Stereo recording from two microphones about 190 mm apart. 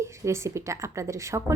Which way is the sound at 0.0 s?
15° right (ahead or behind).